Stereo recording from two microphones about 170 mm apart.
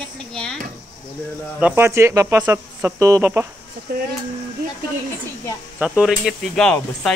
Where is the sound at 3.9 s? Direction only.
65° right (ahead or behind).